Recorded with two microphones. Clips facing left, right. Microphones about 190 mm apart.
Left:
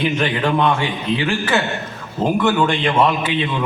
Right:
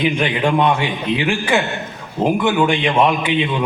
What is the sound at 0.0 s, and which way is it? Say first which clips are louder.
A man's voice: right 1 dB; 15° right (ahead or behind).